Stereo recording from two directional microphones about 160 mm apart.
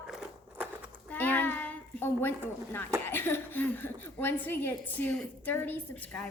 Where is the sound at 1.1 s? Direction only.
10° left (ahead or behind).